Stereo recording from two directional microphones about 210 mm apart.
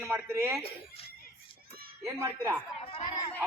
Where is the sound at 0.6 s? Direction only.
25° left (ahead or behind).